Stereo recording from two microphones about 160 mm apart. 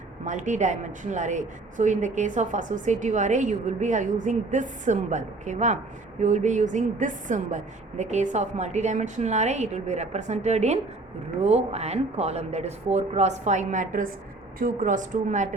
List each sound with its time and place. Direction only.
0.3 s a woman's voice: 50° right (ahead or behind)